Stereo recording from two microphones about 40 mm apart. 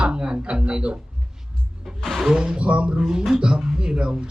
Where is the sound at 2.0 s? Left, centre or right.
Centre.